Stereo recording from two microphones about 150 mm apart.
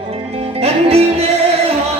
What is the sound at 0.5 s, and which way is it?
Music, 45° right (ahead or behind).